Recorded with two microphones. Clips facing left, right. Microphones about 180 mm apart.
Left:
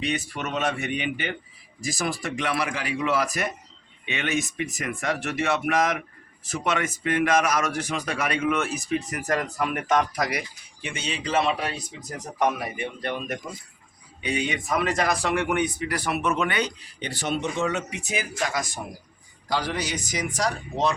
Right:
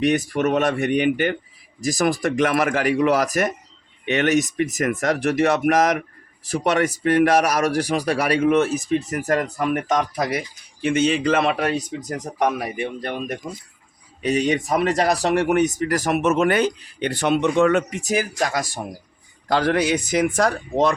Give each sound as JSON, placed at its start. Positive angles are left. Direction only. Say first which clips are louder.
{"t": 0.3, "sound": "speech", "louder": "right 8 dB", "side_deg": -50}
{"t": 9.7, "sound": "speech", "louder": "even", "side_deg": -25}
{"t": 10.8, "sound": "speech", "louder": "right 13 dB", "side_deg": -50}
{"t": 18.0, "sound": "speech", "louder": "right 7 dB", "side_deg": -40}
{"t": 19.5, "sound": "speech", "louder": "right 9 dB", "side_deg": -55}